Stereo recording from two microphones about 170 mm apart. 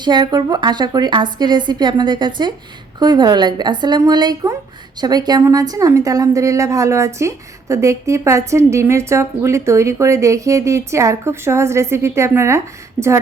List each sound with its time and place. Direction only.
0.0 s a woman's voice: 25° right (ahead or behind)